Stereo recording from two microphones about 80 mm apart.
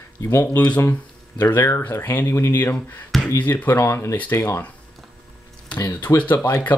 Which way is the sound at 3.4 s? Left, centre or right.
Left.